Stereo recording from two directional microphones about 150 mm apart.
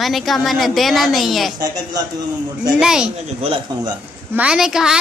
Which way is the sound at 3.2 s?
40° right (ahead or behind).